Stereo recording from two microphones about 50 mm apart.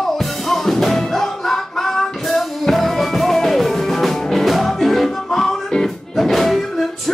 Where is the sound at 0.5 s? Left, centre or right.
Centre.